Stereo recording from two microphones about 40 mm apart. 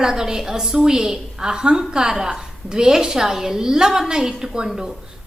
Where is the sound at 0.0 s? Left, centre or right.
Centre.